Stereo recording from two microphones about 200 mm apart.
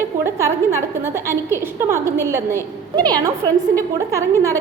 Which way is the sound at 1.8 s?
10° right (ahead or behind).